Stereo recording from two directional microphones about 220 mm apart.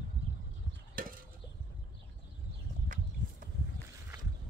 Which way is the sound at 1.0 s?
40° right (ahead or behind).